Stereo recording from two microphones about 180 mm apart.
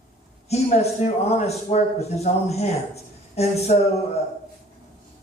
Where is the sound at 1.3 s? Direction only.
35° left (ahead or behind).